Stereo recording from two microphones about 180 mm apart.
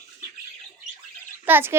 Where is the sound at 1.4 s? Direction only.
10° right (ahead or behind).